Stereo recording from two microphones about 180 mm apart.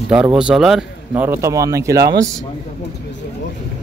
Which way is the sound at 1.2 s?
15° right (ahead or behind).